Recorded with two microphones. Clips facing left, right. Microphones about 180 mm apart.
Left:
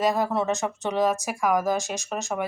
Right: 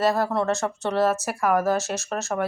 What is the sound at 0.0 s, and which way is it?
Speech, 15° left (ahead or behind).